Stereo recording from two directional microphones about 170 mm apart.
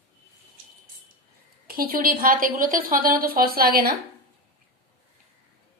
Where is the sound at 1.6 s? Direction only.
60° right (ahead or behind).